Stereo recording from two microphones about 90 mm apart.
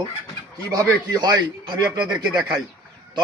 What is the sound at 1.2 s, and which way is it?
A man's voice, 50° right (ahead or behind).